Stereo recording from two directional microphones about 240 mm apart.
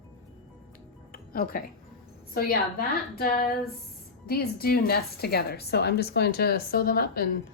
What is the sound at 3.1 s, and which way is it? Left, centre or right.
A woman's voice, left.